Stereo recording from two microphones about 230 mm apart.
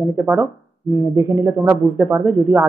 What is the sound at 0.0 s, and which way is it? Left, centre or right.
Speech, centre.